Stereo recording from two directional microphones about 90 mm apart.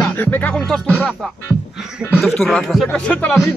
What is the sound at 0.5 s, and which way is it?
Speech, 5° left (ahead or behind).